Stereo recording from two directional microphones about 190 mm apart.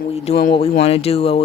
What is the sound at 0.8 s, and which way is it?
Speech, 30° left (ahead or behind).